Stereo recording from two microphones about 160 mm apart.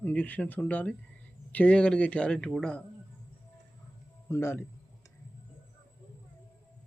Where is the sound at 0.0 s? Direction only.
10° left (ahead or behind).